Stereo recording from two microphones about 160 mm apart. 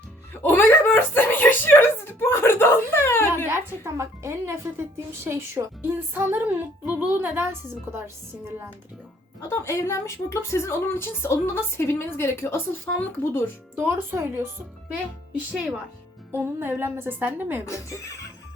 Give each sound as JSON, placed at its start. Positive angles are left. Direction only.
{"t": 0.4, "sound": "a woman's voice", "side_deg": 10}
{"t": 3.5, "sound": "speech", "side_deg": -15}
{"t": 9.4, "sound": "a woman's voice", "side_deg": 15}
{"t": 13.7, "sound": "speech", "side_deg": -15}
{"t": 16.3, "sound": "speech", "side_deg": -15}
{"t": 17.7, "sound": "speech", "side_deg": 20}